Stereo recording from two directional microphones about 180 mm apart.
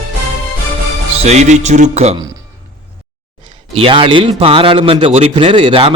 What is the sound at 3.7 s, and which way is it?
A man's voice, 30° right (ahead or behind).